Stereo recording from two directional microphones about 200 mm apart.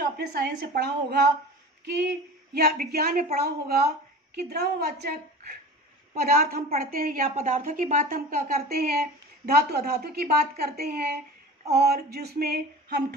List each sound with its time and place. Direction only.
0.0 s a woman's voice: 55° right (ahead or behind)
1.9 s a sound: 55° right (ahead or behind)
2.8 s a woman's voice: 50° right (ahead or behind)
6.1 s a woman's voice: 50° right (ahead or behind)